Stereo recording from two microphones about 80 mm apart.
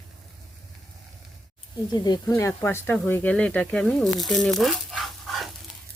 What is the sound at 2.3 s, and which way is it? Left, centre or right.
Speech, left.